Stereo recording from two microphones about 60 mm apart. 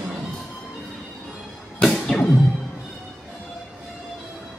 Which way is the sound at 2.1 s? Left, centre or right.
Centre.